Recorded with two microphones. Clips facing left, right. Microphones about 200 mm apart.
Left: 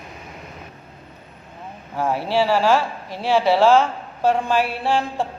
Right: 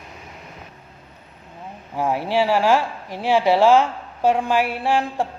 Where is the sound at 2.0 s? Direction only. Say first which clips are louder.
Even; 15° right (ahead or behind).